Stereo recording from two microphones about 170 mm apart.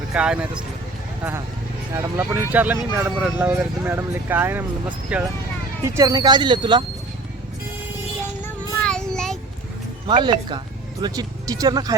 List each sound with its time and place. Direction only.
0.1 s speech: 5° right (ahead or behind)
1.9 s speech: 15° right (ahead or behind)
6.0 s speech: 25° right (ahead or behind)
8.4 s child singing: 5° left (ahead or behind)
10.1 s speech: 25° right (ahead or behind)